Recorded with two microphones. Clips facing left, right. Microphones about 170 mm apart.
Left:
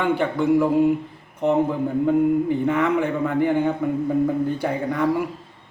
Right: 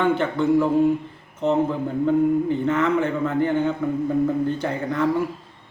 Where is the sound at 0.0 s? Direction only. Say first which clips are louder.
Even; 10° left (ahead or behind).